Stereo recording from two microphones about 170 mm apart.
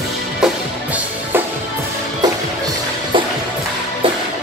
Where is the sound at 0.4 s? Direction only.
10° right (ahead or behind).